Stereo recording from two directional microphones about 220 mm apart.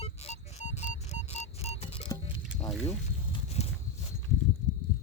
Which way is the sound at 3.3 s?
30° left (ahead or behind).